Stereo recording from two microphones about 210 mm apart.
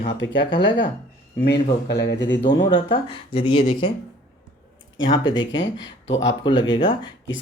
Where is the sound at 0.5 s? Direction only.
55° left (ahead or behind).